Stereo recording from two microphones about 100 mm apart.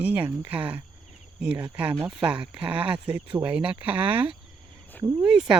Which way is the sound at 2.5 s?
15° right (ahead or behind).